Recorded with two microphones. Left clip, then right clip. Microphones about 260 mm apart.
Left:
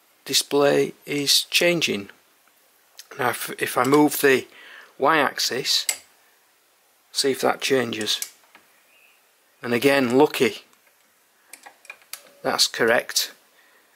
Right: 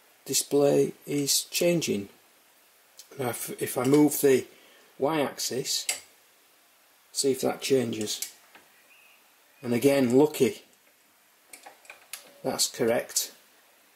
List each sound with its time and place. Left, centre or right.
0.2 s speech: centre
3.2 s speech: centre
7.2 s speech: centre
9.6 s speech: centre
12.4 s speech: centre